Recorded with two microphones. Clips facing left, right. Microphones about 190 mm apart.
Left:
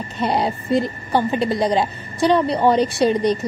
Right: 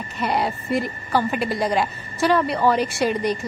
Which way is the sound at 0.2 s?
25° left (ahead or behind).